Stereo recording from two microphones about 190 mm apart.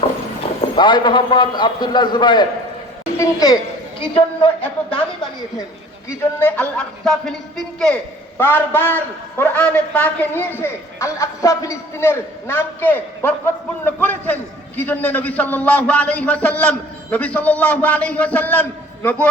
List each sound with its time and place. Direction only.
0.4 s clip-clop: 30° left (ahead or behind)
0.8 s a man's voice: 25° left (ahead or behind)
4.0 s a man's voice: 30° left (ahead or behind)
4.6 s a sound: 5° left (ahead or behind)
6.4 s a man's voice: 5° left (ahead or behind)